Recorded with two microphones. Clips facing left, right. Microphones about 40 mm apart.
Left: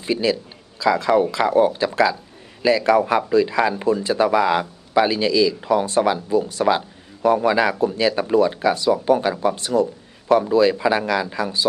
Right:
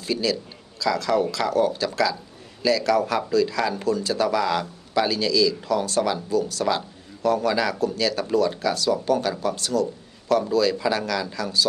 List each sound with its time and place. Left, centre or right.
0.0 s a man's voice: left